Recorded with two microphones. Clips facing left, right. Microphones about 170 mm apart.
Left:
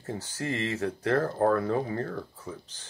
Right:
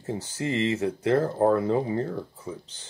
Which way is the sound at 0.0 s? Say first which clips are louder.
Right 4 dB; 20° right (ahead or behind).